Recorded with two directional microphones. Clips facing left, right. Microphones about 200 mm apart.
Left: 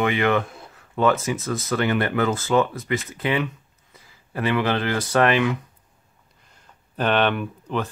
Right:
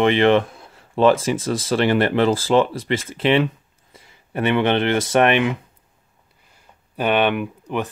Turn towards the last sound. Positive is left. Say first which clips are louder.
# right 2 dB
turn(degrees=-15)  # may be behind; listen again after turning